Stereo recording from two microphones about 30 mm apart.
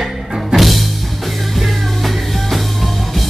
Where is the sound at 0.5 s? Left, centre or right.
Right.